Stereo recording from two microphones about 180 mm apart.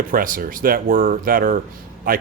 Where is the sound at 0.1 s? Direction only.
50° right (ahead or behind).